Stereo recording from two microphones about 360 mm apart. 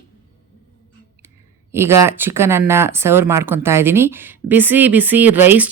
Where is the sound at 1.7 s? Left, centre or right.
Centre.